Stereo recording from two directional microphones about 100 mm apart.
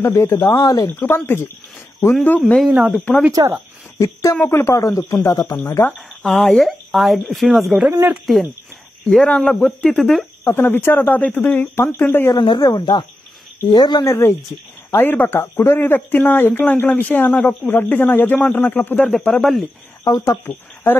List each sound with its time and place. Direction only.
0.0 s speech: 30° left (ahead or behind)
0.8 s speech: 20° left (ahead or behind)
2.6 s speech: 5° right (ahead or behind)
3.4 s speech: 45° right (ahead or behind)
4.0 s speech: 30° left (ahead or behind)
5.9 s speech: 5° left (ahead or behind)
9.1 s speech: 10° left (ahead or behind)
10.4 s speech: 25° left (ahead or behind)
12.4 s speech: 50° left (ahead or behind)
14.0 s speech: 30° left (ahead or behind); by 19.6 s 5° left (ahead or behind)
20.1 s speech: 30° left (ahead or behind)